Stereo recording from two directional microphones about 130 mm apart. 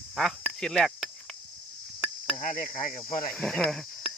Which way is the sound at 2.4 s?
90° left.